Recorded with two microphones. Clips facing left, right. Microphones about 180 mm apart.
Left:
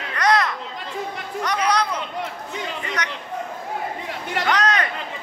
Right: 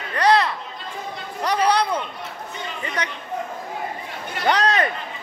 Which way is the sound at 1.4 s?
35° right (ahead or behind).